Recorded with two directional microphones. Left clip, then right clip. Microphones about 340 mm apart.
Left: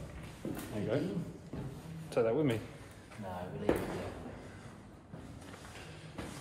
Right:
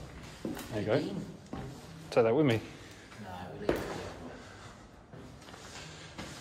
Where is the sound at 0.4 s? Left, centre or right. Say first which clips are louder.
Right 2 dB; right.